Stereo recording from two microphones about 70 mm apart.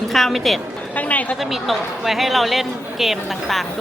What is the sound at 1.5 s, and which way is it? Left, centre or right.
A woman's voice, centre.